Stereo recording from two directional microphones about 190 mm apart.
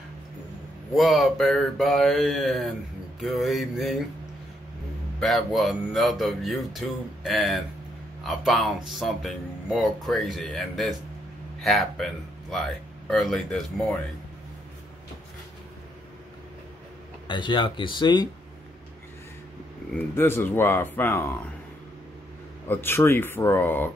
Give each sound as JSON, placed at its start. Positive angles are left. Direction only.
{"t": 0.9, "sound": "speech", "side_deg": 0}
{"t": 5.2, "sound": "speech", "side_deg": 0}
{"t": 17.3, "sound": "speech", "side_deg": 25}
{"t": 19.9, "sound": "speech", "side_deg": 10}
{"t": 22.7, "sound": "speech", "side_deg": 10}